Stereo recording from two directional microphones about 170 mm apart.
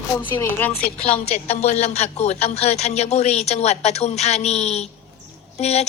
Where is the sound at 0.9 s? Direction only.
35° left (ahead or behind).